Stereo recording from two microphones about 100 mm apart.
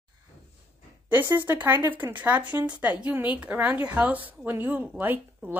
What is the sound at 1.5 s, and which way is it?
A woman's voice, 25° right (ahead or behind).